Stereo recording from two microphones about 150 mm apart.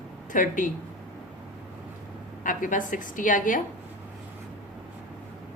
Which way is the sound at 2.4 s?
60° left (ahead or behind).